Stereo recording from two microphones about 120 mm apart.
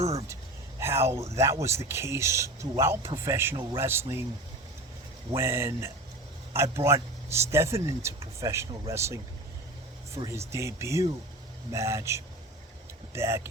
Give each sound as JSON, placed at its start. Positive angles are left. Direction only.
{"t": 0.0, "sound": "speech", "side_deg": -60}
{"t": 0.8, "sound": "speech", "side_deg": -20}
{"t": 5.3, "sound": "speech", "side_deg": -20}
{"t": 10.2, "sound": "speech", "side_deg": -25}